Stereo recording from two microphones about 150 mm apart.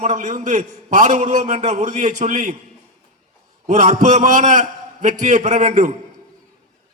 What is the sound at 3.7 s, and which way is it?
A man's voice, 55° right (ahead or behind).